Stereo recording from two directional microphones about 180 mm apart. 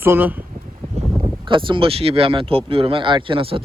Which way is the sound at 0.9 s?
30° right (ahead or behind).